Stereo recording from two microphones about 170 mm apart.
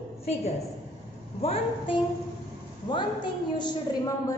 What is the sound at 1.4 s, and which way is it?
A woman's voice, 30° left (ahead or behind).